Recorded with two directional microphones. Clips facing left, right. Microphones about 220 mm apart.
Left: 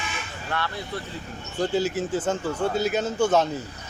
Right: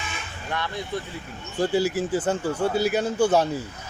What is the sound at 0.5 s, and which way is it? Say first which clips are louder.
Speech: right 1 dB; 15° right (ahead or behind).